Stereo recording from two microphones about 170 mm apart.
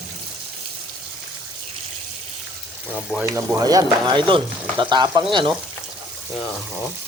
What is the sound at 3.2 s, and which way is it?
Speech, 15° right (ahead or behind).